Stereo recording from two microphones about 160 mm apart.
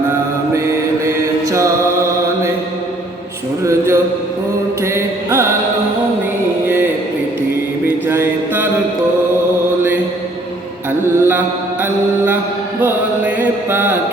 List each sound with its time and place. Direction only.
0.5 s mantra: 20° right (ahead or behind)
3.6 s a sound: 20° right (ahead or behind)
4.9 s music: 15° right (ahead or behind)
7.9 s mantra: 15° right (ahead or behind)
11.2 s mantra: 15° right (ahead or behind)
12.8 s chant: 10° right (ahead or behind)